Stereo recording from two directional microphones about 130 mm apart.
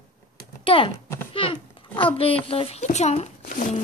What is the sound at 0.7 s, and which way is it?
A child's voice, 45° left (ahead or behind).